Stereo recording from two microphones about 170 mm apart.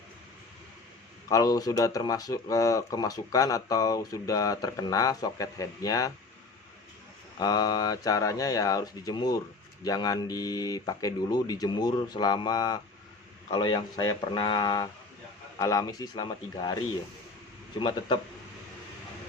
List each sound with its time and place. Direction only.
1.3 s speech: 20° left (ahead or behind)
7.3 s speech: 25° left (ahead or behind)
17.7 s speech: 30° left (ahead or behind)